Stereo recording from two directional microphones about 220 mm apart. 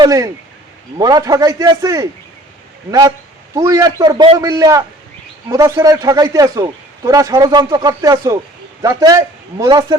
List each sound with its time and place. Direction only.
0.0 s a man's voice: 15° right (ahead or behind)
3.5 s a man's voice: 15° right (ahead or behind)